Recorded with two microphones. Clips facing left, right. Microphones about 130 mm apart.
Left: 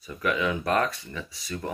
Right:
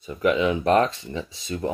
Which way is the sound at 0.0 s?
20° right (ahead or behind).